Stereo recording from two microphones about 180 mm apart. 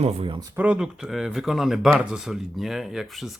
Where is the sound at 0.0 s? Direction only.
30° right (ahead or behind).